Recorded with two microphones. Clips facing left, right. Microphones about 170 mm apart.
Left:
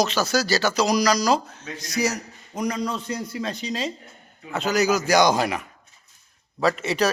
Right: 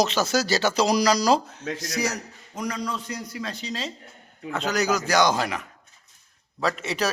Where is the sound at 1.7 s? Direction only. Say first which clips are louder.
Left 4 dB; centre (ahead or behind).